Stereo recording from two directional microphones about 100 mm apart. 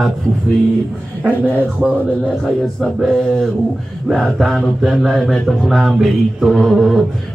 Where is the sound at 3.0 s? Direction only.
5° left (ahead or behind).